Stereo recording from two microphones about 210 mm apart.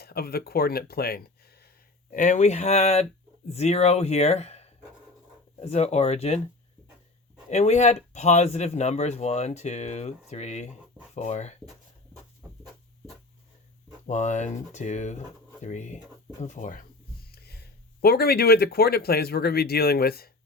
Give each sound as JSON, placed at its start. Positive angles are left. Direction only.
{"t": 0.0, "sound": "speech", "side_deg": 50}
{"t": 7.5, "sound": "speech", "side_deg": 30}
{"t": 12.4, "sound": "a sound", "side_deg": -5}
{"t": 14.1, "sound": "speech", "side_deg": 35}
{"t": 17.3, "sound": "a sound", "side_deg": 50}
{"t": 18.0, "sound": "speech", "side_deg": 45}